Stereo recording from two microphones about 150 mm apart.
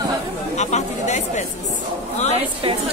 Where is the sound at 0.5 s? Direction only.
50° left (ahead or behind).